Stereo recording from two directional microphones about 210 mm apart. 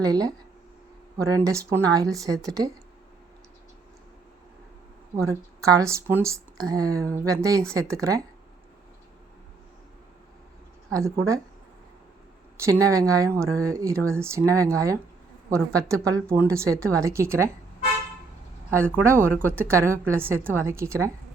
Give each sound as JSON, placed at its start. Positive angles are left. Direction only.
{"t": 0.0, "sound": "speech", "side_deg": -15}
{"t": 5.3, "sound": "speech", "side_deg": -15}
{"t": 10.9, "sound": "speech", "side_deg": -15}
{"t": 12.5, "sound": "speech", "side_deg": -15}
{"t": 19.0, "sound": "speech", "side_deg": -10}